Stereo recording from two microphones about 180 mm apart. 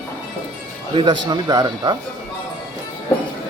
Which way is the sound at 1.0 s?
25° right (ahead or behind).